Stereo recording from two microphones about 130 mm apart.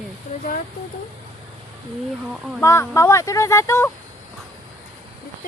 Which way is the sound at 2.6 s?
20° left (ahead or behind).